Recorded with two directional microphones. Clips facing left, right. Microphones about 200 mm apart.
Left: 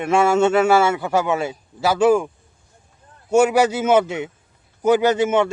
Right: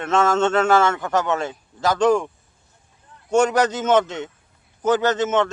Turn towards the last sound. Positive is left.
turn(degrees=10)  # may be behind; listen again after turning